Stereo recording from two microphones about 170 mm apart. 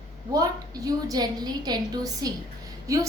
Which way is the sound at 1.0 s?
20° right (ahead or behind).